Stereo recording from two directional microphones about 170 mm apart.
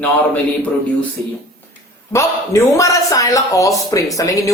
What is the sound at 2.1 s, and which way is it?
A man's voice, 15° left (ahead or behind).